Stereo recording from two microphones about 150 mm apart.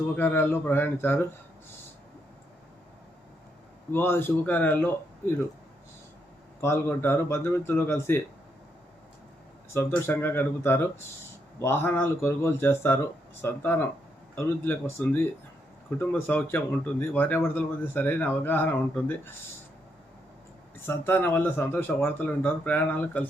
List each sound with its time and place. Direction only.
0.2 s speech: 15° left (ahead or behind)
3.9 s speech: 15° left (ahead or behind)
6.6 s speech: 15° left (ahead or behind)
9.7 s speech: 15° left (ahead or behind)
16.0 s speech: 15° left (ahead or behind)
20.8 s speech: 15° left (ahead or behind)